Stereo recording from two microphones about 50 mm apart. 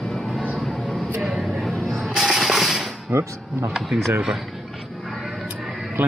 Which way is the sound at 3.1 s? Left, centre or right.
Right.